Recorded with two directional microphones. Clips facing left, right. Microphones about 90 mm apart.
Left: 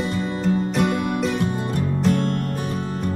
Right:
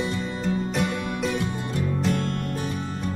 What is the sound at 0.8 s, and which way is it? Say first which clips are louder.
Music: left 5 dB; 50° left (ahead or behind).